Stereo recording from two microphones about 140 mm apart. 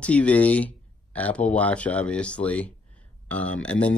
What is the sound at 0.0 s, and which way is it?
Speech, 10° left (ahead or behind).